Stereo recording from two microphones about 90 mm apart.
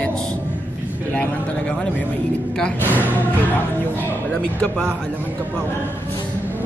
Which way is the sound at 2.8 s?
20° right (ahead or behind).